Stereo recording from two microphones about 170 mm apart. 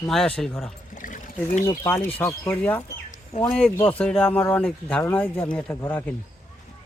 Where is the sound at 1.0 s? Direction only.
50° left (ahead or behind).